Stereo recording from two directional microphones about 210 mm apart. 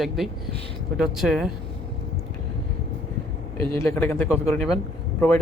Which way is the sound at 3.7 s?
10° left (ahead or behind).